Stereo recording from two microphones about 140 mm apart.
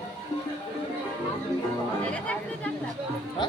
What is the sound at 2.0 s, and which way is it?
Speech, 10° left (ahead or behind).